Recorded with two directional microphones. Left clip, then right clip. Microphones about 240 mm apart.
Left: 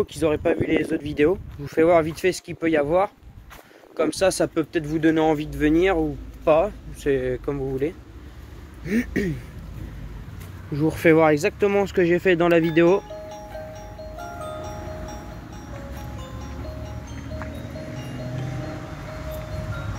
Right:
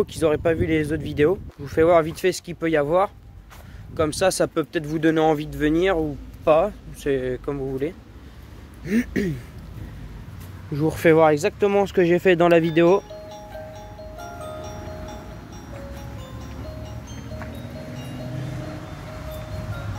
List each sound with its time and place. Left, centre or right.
0.0 s speech: right
10.7 s speech: centre
13.7 s music: centre